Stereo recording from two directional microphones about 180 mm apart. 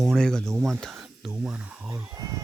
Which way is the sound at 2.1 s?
20° right (ahead or behind).